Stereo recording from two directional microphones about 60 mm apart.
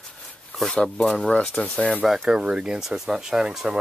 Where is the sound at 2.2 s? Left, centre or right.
Centre.